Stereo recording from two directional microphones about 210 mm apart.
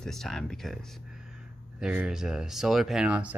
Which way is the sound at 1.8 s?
5° right (ahead or behind).